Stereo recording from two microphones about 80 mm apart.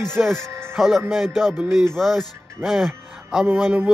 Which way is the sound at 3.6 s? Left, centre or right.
Centre.